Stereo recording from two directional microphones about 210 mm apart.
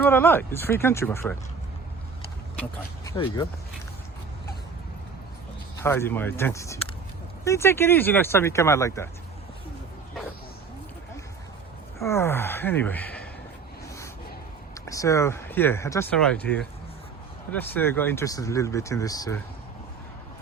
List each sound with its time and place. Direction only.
0.0 s speech: 10° left (ahead or behind)
2.6 s speech: 15° left (ahead or behind)
5.8 s speech: 10° left (ahead or behind)
11.9 s speech: 15° left (ahead or behind)
14.8 s speech: 15° left (ahead or behind)